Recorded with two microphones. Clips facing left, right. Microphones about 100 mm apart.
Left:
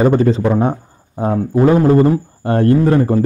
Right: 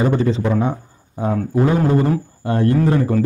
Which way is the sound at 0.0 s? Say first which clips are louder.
Left 5 dB; 45° left (ahead or behind).